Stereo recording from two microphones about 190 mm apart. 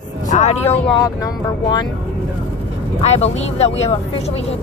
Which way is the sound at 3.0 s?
35° left (ahead or behind).